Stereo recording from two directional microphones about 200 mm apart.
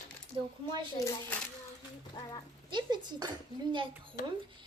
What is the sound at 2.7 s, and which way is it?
Speech, 20° right (ahead or behind).